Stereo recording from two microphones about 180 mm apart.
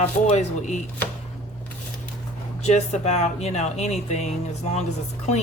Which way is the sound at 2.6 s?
35° left (ahead or behind).